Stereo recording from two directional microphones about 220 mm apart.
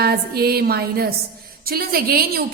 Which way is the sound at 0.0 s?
45° right (ahead or behind).